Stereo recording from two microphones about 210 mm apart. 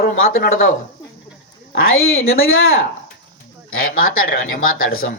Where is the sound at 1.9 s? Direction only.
75° left (ahead or behind).